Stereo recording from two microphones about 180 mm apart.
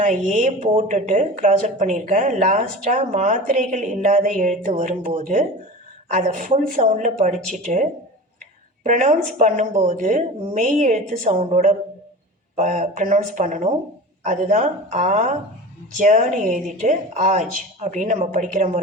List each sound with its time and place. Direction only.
0.0 s a woman's voice: 45° right (ahead or behind)